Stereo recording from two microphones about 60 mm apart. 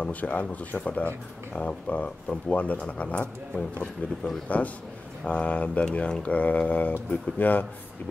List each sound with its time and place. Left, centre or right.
0.0 s speech: left